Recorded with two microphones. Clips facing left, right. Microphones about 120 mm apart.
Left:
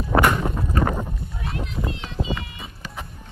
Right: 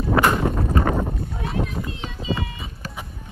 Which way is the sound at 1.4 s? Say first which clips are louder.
Right 5 dB; centre (ahead or behind).